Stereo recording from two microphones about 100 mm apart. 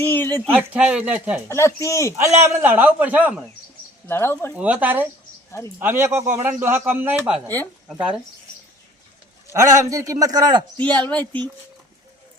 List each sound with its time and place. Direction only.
0.0 s speech: 20° left (ahead or behind)
0.5 s speech: 15° right (ahead or behind)
1.5 s speech: 30° left (ahead or behind)
2.1 s speech: 30° right (ahead or behind)
4.1 s speech: 25° left (ahead or behind)
4.5 s speech: 15° right (ahead or behind)
5.5 s speech: 25° left (ahead or behind)
5.8 s speech: 25° right (ahead or behind)
7.4 s speech: 20° left (ahead or behind)
9.5 s a man's voice: 30° right (ahead or behind)
10.8 s speech: 15° left (ahead or behind)